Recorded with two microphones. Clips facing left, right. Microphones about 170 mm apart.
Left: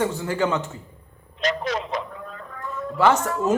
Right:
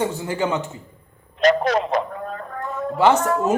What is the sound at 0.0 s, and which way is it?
Speech, 20° right (ahead or behind).